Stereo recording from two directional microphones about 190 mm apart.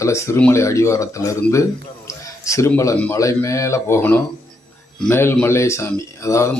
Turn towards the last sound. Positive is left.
turn(degrees=15)  # may be behind; listen again after turning